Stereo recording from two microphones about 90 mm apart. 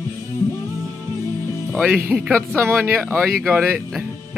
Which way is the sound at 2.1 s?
20° right (ahead or behind).